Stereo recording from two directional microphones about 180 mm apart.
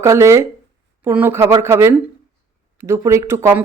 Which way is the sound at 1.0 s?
10° right (ahead or behind).